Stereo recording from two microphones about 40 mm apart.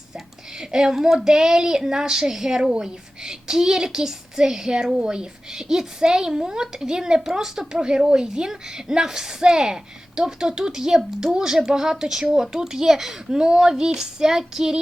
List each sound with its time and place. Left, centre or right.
0.6 s a child's voice: centre